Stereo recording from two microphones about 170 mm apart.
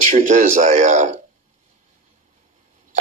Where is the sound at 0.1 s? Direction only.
45° right (ahead or behind).